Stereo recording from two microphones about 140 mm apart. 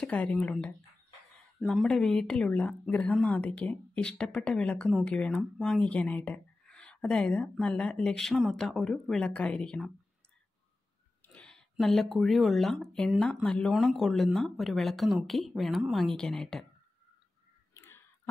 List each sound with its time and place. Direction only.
0.0 s speech: 10° left (ahead or behind)
11.2 s speech: 10° left (ahead or behind)
17.7 s clicking: 20° left (ahead or behind)